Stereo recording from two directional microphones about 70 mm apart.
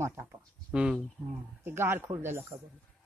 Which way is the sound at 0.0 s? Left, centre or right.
Right.